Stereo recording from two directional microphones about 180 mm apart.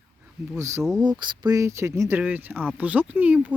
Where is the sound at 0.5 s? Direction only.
15° right (ahead or behind).